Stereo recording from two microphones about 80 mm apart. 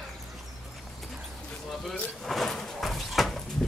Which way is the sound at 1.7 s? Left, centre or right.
Centre.